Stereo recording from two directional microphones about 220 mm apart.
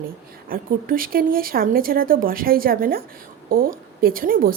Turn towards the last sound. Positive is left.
turn(degrees=-40)  # may be behind; listen again after turning